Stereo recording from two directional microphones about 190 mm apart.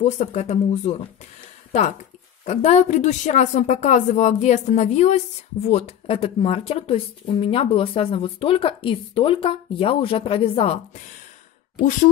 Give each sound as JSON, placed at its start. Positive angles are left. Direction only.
{"t": 0.0, "sound": "speech", "side_deg": 35}